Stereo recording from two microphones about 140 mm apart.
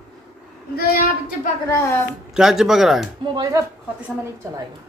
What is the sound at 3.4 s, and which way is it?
Speech, 25° right (ahead or behind).